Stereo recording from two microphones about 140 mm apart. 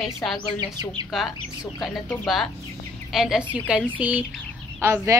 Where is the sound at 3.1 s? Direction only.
Centre (ahead or behind).